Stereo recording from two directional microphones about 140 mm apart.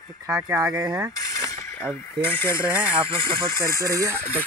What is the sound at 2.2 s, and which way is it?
Speech, 15° left (ahead or behind).